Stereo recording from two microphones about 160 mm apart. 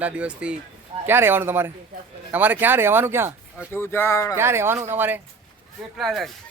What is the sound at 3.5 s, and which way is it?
Speech, 15° left (ahead or behind).